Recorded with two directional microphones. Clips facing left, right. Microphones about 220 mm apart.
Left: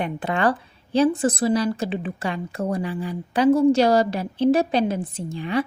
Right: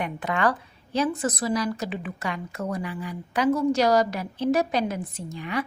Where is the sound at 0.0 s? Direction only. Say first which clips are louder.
Left 3 dB; 30° left (ahead or behind).